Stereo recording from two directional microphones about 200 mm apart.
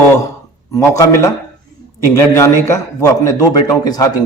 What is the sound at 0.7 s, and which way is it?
A man's voice, 15° left (ahead or behind).